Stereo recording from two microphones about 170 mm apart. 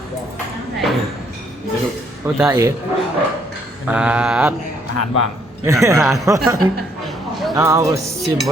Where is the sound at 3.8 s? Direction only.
5° right (ahead or behind).